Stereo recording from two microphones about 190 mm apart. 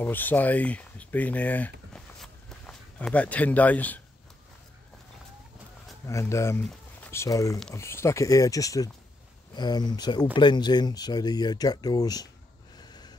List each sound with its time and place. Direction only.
0.0 s speech: 10° left (ahead or behind)
6.0 s speech: 15° left (ahead or behind)
12.7 s a sound: 20° left (ahead or behind)